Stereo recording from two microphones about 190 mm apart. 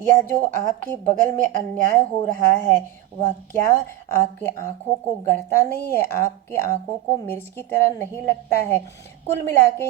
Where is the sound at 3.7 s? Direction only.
10° left (ahead or behind).